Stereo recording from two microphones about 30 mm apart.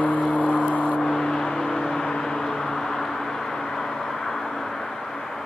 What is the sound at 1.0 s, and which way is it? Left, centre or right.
Vehicle, left.